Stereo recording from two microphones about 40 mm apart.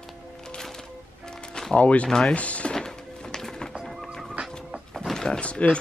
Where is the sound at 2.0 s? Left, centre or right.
Centre.